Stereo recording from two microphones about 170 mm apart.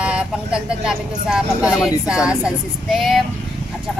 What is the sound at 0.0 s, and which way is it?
Speech, 5° right (ahead or behind).